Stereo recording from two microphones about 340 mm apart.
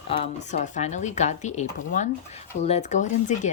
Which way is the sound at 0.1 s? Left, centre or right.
Centre.